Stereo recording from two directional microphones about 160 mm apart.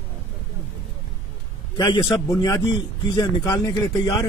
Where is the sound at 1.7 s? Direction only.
25° left (ahead or behind).